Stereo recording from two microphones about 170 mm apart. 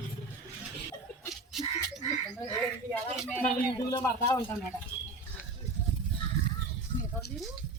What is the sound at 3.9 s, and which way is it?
Speech, 20° left (ahead or behind).